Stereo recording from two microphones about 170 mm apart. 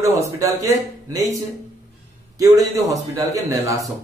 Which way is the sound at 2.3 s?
20° right (ahead or behind).